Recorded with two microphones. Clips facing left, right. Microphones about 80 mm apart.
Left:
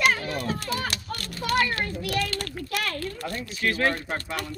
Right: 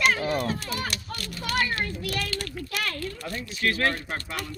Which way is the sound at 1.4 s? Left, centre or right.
Left.